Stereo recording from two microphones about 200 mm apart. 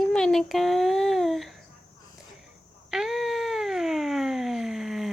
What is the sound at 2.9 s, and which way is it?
Cat, centre (ahead or behind).